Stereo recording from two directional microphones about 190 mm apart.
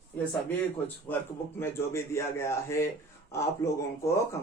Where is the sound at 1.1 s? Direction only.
10° left (ahead or behind).